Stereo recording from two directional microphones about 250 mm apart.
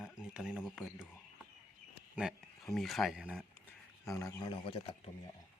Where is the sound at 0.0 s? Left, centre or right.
Centre.